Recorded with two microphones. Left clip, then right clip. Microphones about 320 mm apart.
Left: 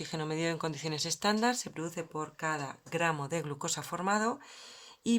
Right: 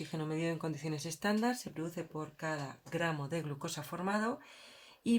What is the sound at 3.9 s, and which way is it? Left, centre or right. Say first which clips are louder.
Speech: left 3 dB; left.